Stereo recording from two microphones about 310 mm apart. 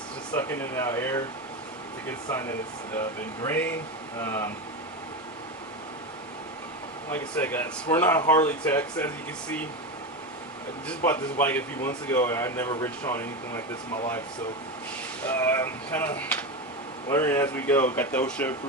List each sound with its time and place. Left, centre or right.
0.3 s speech: centre
3.4 s speech: centre
7.1 s speech: centre
10.8 s speech: centre
15.2 s speech: centre